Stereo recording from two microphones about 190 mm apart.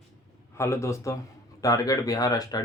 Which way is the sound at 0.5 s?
15° left (ahead or behind).